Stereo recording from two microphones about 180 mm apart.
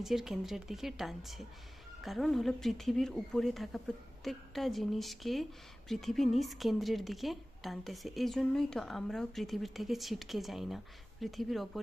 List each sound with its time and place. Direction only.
0.0 s a woman's voice: centre (ahead or behind)